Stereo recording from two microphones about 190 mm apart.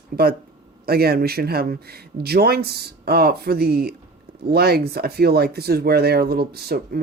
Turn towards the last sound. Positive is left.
turn(degrees=-55)  # may be behind; listen again after turning